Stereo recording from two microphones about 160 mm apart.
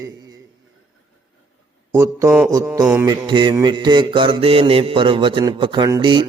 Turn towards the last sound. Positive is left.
turn(degrees=-30)  # may be behind; listen again after turning